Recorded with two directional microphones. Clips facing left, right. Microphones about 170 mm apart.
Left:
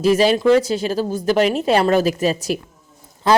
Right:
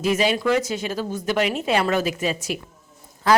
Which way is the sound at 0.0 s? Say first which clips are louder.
Left 6 dB; 35° left (ahead or behind).